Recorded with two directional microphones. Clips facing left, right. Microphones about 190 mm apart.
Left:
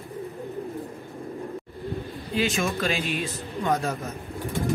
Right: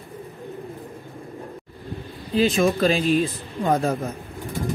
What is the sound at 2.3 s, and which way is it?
Speech, 35° right (ahead or behind).